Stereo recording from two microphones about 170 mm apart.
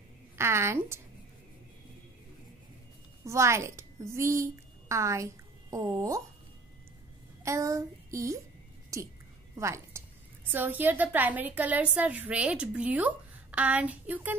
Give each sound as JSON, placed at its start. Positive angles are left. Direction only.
{"t": 0.4, "sound": "a woman's voice", "side_deg": -15}
{"t": 3.3, "sound": "a woman's voice", "side_deg": -15}
{"t": 7.4, "sound": "a woman's voice", "side_deg": -20}